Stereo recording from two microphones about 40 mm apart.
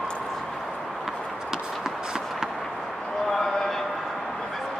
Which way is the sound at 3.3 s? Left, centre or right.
Centre.